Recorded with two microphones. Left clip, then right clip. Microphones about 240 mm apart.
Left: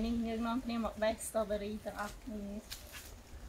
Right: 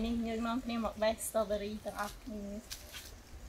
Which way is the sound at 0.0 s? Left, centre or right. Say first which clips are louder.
Right 1 dB; centre.